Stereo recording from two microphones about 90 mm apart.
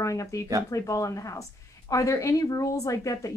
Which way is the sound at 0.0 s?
35° left (ahead or behind).